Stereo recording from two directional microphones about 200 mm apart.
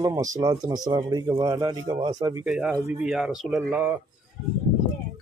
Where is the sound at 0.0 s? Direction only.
15° right (ahead or behind).